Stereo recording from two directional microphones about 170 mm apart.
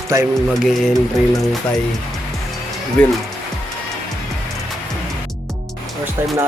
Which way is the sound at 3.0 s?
5° left (ahead or behind).